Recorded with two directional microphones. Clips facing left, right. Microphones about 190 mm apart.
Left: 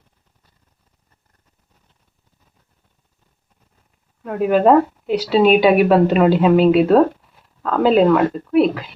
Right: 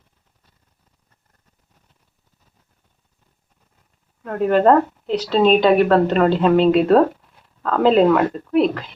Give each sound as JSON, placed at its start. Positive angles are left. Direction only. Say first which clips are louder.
{"t": 4.2, "sound": "speech", "louder": "left 1 dB", "side_deg": 5}